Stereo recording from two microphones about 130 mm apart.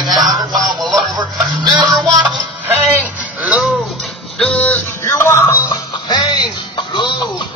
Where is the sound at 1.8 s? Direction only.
Centre (ahead or behind).